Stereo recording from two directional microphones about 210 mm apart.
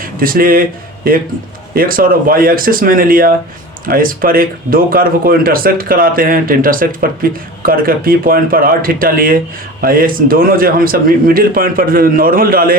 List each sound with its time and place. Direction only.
0.0 s speech: 45° right (ahead or behind)
1.7 s speech: 45° right (ahead or behind)